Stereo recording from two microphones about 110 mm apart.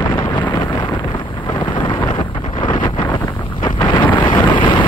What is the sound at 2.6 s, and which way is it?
Wind noise, 45° left (ahead or behind).